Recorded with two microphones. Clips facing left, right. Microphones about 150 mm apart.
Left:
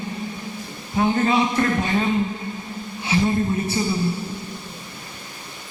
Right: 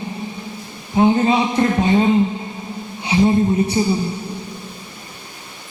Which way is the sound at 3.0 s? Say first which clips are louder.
Right 5 dB; 20° right (ahead or behind).